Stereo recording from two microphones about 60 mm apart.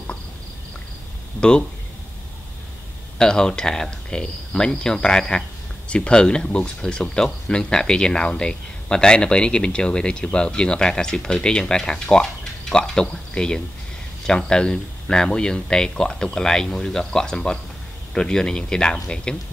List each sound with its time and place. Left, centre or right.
3.2 s speech: centre